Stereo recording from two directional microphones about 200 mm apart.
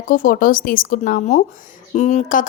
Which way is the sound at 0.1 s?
45° left (ahead or behind).